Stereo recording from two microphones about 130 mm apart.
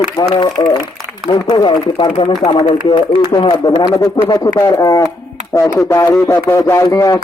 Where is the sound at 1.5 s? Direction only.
35° left (ahead or behind).